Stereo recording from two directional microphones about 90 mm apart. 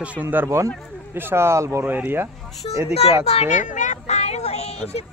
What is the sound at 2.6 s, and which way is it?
Speech, 80° left.